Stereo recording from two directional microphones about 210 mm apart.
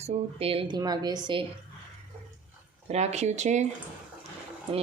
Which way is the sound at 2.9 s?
30° right (ahead or behind).